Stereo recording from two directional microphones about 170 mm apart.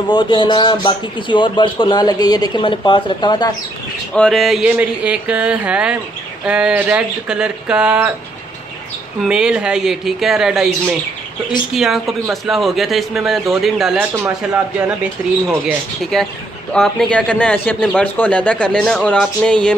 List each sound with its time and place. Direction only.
0.1 s speech: 30° left (ahead or behind)
4.1 s a man's voice: 5° left (ahead or behind)
9.2 s a man's voice: 5° right (ahead or behind)
11.7 s a man's voice: centre (ahead or behind)
16.0 s a man's voice: centre (ahead or behind)